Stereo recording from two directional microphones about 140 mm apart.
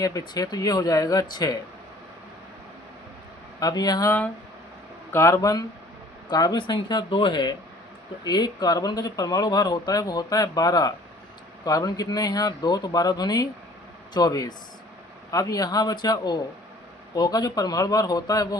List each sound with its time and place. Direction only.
0.0 s speech: 25° left (ahead or behind)
3.6 s speech: 25° left (ahead or behind)
5.1 s speech: 20° left (ahead or behind)